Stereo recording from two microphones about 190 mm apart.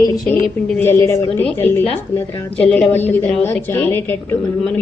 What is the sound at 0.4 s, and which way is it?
A woman's voice, 10° left (ahead or behind).